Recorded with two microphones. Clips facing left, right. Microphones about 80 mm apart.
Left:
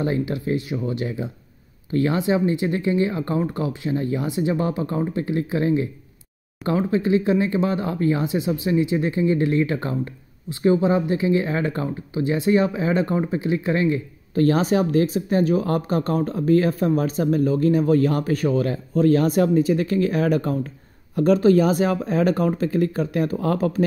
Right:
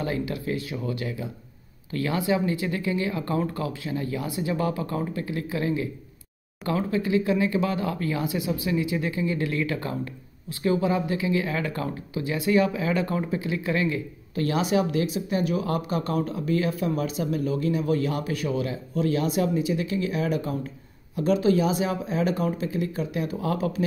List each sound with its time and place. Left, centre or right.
0.0 s speech: left